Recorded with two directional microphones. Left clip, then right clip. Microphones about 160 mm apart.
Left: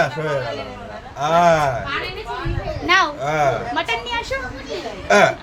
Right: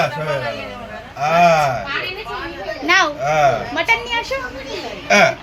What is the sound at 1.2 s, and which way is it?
Speech, 50° left (ahead or behind).